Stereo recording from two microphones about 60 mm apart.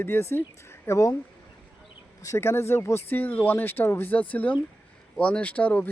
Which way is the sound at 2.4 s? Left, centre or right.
Left.